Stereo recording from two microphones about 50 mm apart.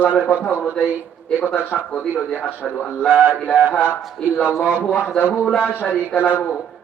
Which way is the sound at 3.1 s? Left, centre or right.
Right.